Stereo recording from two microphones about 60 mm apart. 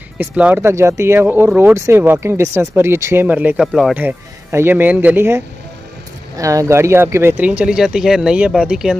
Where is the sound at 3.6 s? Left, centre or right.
Centre.